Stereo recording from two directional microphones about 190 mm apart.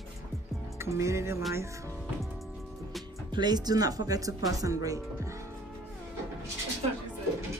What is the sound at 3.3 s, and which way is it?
Speech, 20° right (ahead or behind).